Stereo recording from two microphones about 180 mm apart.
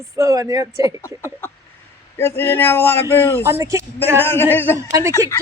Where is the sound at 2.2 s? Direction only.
15° left (ahead or behind).